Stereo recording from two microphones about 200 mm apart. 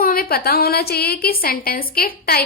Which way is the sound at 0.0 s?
45° left (ahead or behind).